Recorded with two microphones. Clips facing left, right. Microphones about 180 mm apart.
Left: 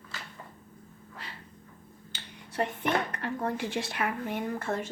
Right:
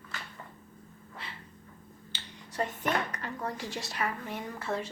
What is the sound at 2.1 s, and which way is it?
A woman's voice, 55° left (ahead or behind).